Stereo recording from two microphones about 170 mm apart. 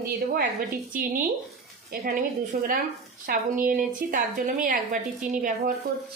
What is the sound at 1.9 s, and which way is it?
A woman's voice, 60° right (ahead or behind).